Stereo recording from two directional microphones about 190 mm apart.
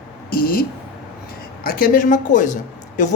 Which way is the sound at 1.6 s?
50° left (ahead or behind).